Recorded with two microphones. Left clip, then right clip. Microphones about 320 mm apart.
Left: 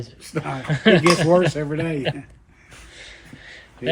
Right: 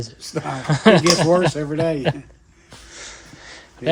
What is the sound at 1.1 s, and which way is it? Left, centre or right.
Speech, right.